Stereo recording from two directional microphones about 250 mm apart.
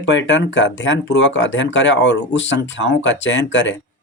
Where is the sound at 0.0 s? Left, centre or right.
Left.